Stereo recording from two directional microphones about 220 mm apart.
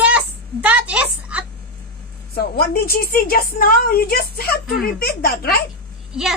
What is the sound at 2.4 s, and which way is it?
A woman's voice, 45° left (ahead or behind).